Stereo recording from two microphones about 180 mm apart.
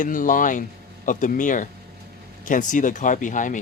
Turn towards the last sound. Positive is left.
turn(degrees=45)  # may be behind; listen again after turning